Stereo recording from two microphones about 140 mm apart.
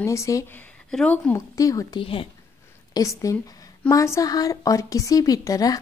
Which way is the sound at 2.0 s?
40° left (ahead or behind).